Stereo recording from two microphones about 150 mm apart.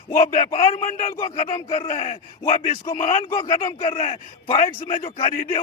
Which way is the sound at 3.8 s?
40° left (ahead or behind).